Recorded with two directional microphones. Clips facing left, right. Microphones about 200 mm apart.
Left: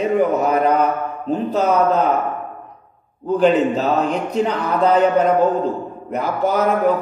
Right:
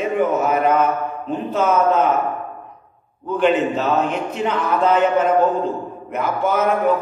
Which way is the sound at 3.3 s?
35° left (ahead or behind).